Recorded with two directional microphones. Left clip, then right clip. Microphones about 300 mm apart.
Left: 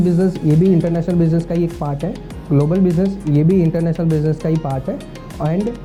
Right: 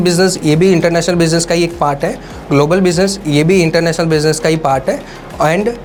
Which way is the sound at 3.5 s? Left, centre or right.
Right.